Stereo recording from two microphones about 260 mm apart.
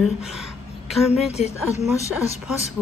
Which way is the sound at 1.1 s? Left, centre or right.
Left.